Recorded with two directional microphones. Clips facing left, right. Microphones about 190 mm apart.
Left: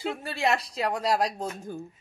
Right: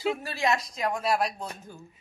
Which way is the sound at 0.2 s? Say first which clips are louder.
Left 1 dB; 30° left (ahead or behind).